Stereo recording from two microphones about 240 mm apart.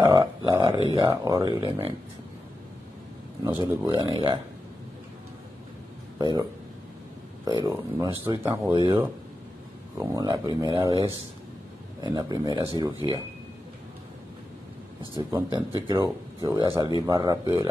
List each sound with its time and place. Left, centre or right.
0.0 s a sound: centre
1.1 s speech: centre
3.6 s speech: centre
6.1 s speech: centre
7.4 s speech: centre
15.0 s speech: centre